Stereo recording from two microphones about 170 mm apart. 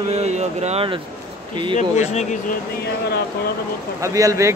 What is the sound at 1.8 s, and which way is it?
Speech, 45° left (ahead or behind).